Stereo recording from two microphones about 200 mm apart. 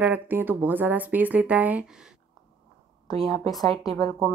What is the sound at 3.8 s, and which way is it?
Speech, 20° left (ahead or behind).